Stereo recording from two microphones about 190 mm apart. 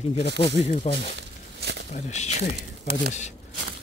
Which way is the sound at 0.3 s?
65° right (ahead or behind).